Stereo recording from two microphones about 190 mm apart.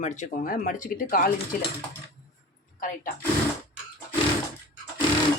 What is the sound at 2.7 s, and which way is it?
Speech, 45° left (ahead or behind).